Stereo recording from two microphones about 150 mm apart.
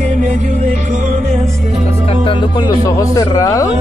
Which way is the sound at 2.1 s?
35° left (ahead or behind).